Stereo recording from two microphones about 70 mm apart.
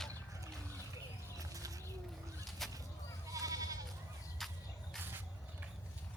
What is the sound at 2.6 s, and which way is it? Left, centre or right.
Bird, centre.